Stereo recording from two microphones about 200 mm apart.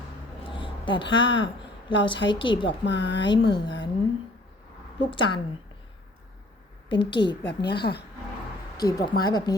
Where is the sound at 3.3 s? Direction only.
25° left (ahead or behind).